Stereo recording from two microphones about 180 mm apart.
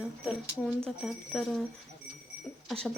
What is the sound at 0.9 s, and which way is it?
Speech, centre (ahead or behind).